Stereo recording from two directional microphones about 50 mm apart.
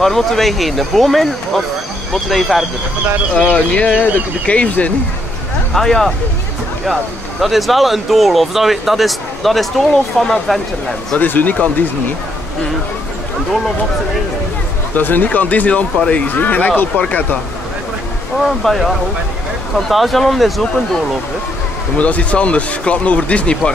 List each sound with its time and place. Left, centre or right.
0.0 s speech: centre
3.4 s speech: left
5.7 s speech: centre
11.1 s speech: left
15.0 s speech: left
18.6 s speech: centre
21.9 s speech: left